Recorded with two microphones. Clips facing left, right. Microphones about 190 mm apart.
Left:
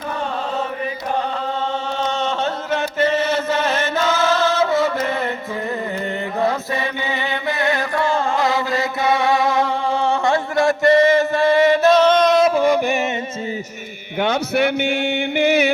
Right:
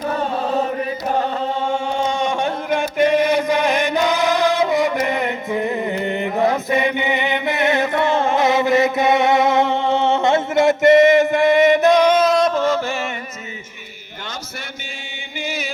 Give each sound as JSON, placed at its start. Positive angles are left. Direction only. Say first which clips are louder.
{"t": 2.7, "sound": "chant", "louder": "right 3 dB", "side_deg": -15}
{"t": 6.4, "sound": "chant", "louder": "right 3 dB", "side_deg": -20}
{"t": 12.5, "sound": "music", "louder": "left 3 dB", "side_deg": 15}
{"t": 14.2, "sound": "a sound", "louder": "left 15 dB", "side_deg": 65}
{"t": 15.4, "sound": "music", "louder": "left 11 dB", "side_deg": 65}